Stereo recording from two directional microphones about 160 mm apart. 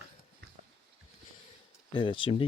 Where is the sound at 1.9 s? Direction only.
30° left (ahead or behind).